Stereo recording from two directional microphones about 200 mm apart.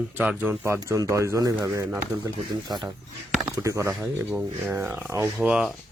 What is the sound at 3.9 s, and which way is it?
Speech, 5° right (ahead or behind).